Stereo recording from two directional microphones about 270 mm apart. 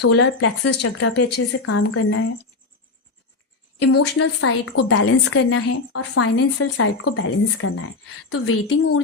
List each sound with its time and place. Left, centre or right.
0.0 s a woman's voice: left
3.9 s a woman's voice: left